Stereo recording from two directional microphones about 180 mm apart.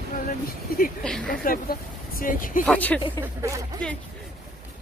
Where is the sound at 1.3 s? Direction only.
50° left (ahead or behind).